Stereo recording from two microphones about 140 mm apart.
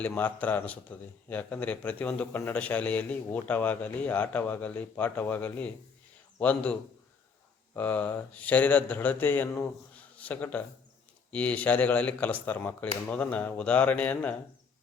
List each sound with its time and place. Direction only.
0.0 s speech: 10° left (ahead or behind)